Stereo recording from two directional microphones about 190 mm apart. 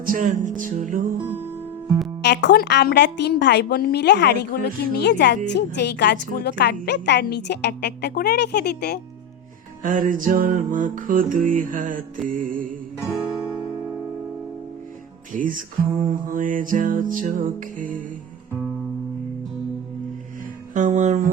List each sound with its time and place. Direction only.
0.0 s music: 45° right (ahead or behind)
2.2 s a woman's voice: 65° left (ahead or behind)
9.8 s music: 45° right (ahead or behind)
13.1 s music: 5° right (ahead or behind)
15.3 s music: 45° right (ahead or behind)
20.7 s music: 40° right (ahead or behind)